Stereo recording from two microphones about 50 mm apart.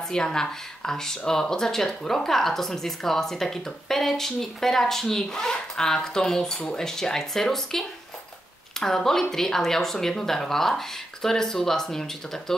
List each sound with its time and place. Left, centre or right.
0.1 s speech: centre